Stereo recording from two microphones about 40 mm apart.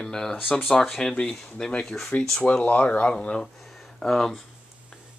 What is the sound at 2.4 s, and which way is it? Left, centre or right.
Speech, left.